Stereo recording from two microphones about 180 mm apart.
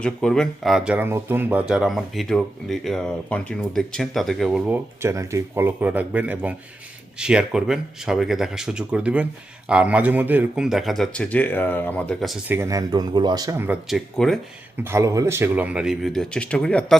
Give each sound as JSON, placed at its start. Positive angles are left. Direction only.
{"t": 0.0, "sound": "speech", "side_deg": 5}
{"t": 0.9, "sound": "speech", "side_deg": -10}
{"t": 12.5, "sound": "speech", "side_deg": -15}
{"t": 13.8, "sound": "speech", "side_deg": 0}
{"t": 14.8, "sound": "speech", "side_deg": -15}